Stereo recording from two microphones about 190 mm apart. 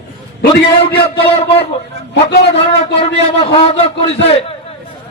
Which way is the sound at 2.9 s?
30° left (ahead or behind).